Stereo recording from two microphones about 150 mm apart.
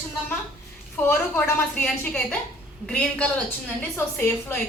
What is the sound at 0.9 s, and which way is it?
A woman's voice, 10° left (ahead or behind).